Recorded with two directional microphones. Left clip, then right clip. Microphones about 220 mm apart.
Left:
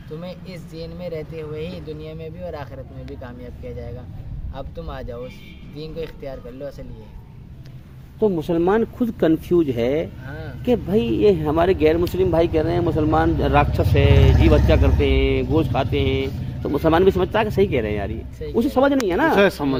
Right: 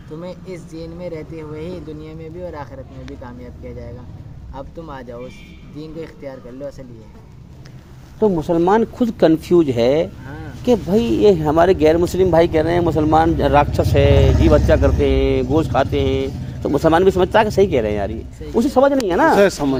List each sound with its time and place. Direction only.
0.2 s speech: 45° left (ahead or behind)
4.5 s speech: 45° left (ahead or behind)
8.2 s speech: 10° right (ahead or behind)
10.2 s a sound: 50° left (ahead or behind)
10.7 s speech: 15° right (ahead or behind)
19.4 s speech: 10° left (ahead or behind)